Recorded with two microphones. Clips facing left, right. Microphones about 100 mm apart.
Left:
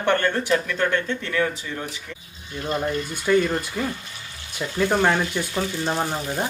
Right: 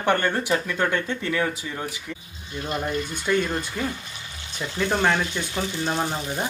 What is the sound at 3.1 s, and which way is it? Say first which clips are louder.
Speech: left 5 dB; 5° left (ahead or behind).